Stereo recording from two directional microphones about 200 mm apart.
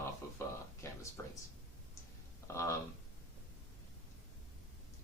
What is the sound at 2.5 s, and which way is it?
Speech, 15° left (ahead or behind).